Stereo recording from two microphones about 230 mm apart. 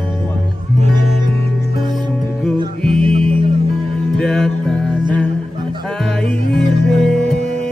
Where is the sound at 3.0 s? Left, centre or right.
Right.